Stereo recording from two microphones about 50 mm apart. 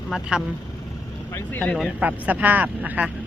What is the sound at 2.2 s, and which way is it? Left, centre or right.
Speech, right.